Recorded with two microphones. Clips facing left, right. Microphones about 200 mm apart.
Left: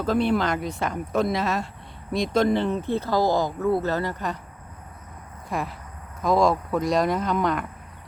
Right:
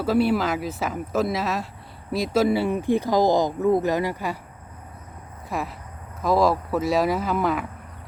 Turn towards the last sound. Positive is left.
turn(degrees=-5)  # may be behind; listen again after turning